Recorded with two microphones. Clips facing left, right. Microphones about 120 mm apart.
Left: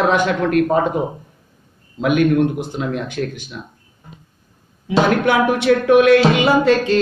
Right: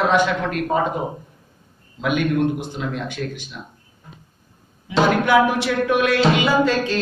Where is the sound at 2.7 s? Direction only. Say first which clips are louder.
Left 4 dB; 45° left (ahead or behind).